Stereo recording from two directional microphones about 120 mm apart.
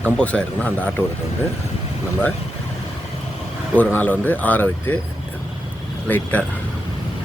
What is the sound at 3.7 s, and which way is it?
Speech, 15° left (ahead or behind).